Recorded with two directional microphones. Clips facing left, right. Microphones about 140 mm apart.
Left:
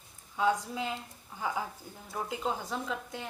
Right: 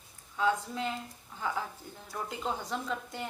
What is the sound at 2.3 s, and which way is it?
A woman's voice, 5° left (ahead or behind).